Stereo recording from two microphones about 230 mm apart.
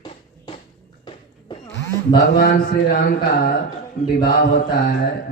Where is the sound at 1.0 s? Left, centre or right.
Centre.